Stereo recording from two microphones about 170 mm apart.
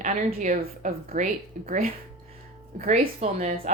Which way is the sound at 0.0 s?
50° right (ahead or behind).